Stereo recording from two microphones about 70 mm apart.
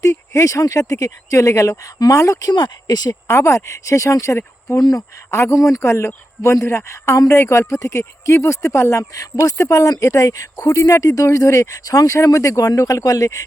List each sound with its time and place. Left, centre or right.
0.0 s speech: left
2.5 s speech: left
3.2 s speech: left
4.7 s speech: left
5.3 s speech: left